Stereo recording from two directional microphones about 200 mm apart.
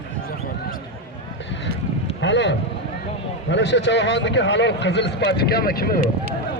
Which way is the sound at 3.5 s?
60° left (ahead or behind).